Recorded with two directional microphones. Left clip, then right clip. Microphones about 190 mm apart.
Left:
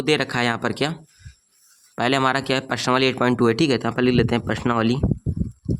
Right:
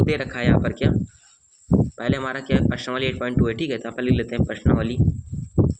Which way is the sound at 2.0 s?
50° left (ahead or behind).